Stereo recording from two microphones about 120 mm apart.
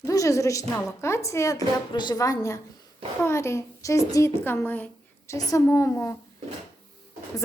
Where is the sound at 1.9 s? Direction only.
40° left (ahead or behind).